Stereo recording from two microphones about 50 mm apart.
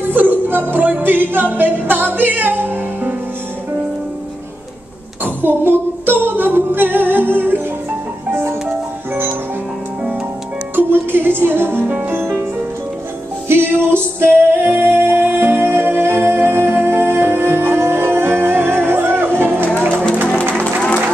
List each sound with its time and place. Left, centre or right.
0.1 s music: right
5.2 s music: right
10.8 s music: right
13.5 s music: right